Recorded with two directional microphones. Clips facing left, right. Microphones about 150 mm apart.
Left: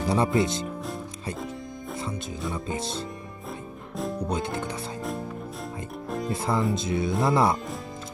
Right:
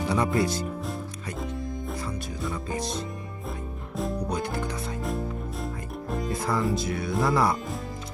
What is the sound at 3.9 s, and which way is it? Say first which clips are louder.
Music: even; centre (ahead or behind).